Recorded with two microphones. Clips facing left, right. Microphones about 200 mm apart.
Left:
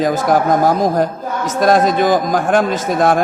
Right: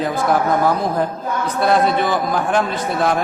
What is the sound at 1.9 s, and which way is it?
Speech, 90° left.